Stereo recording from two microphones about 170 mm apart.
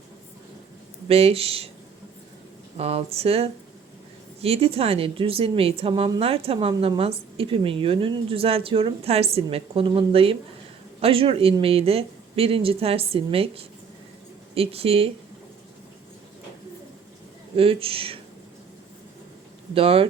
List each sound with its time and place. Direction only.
1.0 s a woman's voice: 35° right (ahead or behind)
2.7 s a woman's voice: 35° right (ahead or behind)
17.6 s a woman's voice: 35° right (ahead or behind)
19.7 s a woman's voice: 35° right (ahead or behind)